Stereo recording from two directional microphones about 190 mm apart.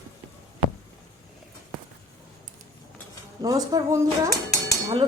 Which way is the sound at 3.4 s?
20° right (ahead or behind).